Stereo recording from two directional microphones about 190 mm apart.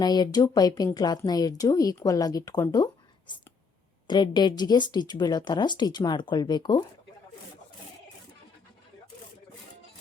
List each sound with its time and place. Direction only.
0.0 s a woman's voice: 20° left (ahead or behind)